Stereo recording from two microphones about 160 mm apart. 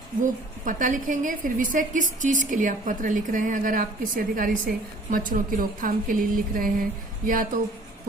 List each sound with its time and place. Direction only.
0.2 s a woman's voice: 55° right (ahead or behind)